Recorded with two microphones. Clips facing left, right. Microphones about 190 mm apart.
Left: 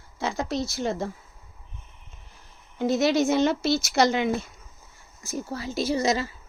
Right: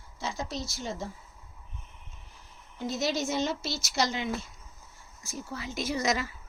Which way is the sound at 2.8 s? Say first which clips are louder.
Left 9 dB; 60° left (ahead or behind).